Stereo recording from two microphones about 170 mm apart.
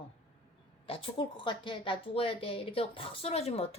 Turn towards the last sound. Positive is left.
turn(degrees=35)  # may be behind; listen again after turning